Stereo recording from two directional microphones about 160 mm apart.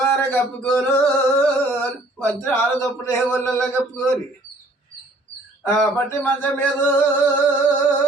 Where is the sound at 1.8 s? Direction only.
15° left (ahead or behind).